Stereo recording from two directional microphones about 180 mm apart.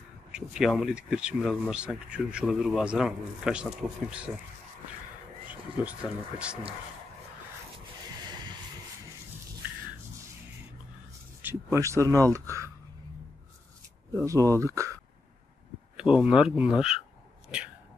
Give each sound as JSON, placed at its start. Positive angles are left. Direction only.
{"t": 0.3, "sound": "speech", "side_deg": -5}
{"t": 5.5, "sound": "speech", "side_deg": -5}
{"t": 11.4, "sound": "speech", "side_deg": -15}
{"t": 14.1, "sound": "speech", "side_deg": -15}
{"t": 16.0, "sound": "speech", "side_deg": -5}